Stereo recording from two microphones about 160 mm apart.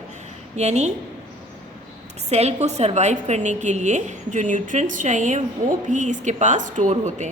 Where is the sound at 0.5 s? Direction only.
45° right (ahead or behind).